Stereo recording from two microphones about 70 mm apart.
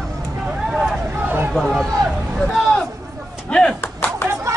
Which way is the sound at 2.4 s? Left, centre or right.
Centre.